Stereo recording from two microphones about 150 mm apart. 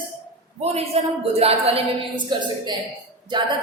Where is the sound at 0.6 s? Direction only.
45° right (ahead or behind).